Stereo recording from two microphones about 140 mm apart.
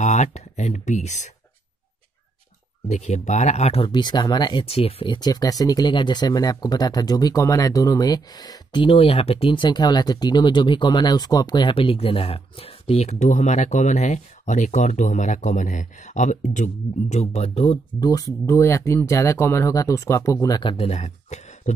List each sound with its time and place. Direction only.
0.0 s speech: 55° left (ahead or behind)
2.9 s speech: 55° left (ahead or behind)
3.9 s speech: 30° left (ahead or behind)
4.6 s speech: 45° left (ahead or behind)
18.0 s speech: 25° left (ahead or behind)
20.7 s speech: 45° left (ahead or behind)